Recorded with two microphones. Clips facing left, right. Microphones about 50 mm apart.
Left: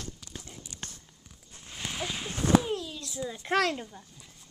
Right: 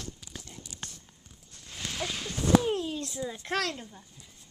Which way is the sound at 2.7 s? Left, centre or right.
Right.